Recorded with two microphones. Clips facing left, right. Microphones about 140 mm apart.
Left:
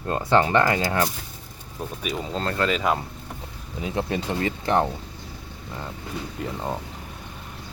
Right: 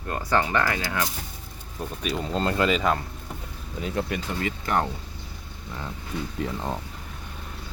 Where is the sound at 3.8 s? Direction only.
20° left (ahead or behind).